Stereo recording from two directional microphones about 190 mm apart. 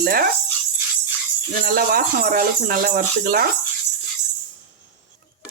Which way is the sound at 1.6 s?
50° right (ahead or behind).